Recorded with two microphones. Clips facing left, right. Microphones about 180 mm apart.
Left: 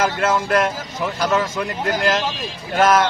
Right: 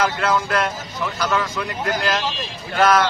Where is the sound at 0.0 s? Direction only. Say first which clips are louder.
Left 1 dB; 45° left (ahead or behind).